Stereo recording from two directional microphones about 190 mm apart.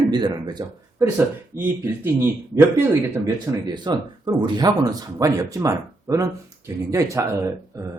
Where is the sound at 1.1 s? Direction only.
10° right (ahead or behind).